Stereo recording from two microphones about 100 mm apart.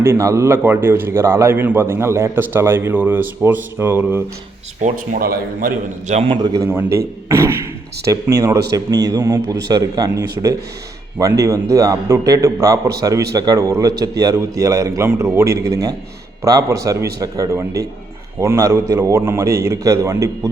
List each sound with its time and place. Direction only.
0.0 s a man's voice: 30° right (ahead or behind)
6.1 s a man's voice: 60° right (ahead or behind)
6.7 s a man's voice: 25° right (ahead or behind)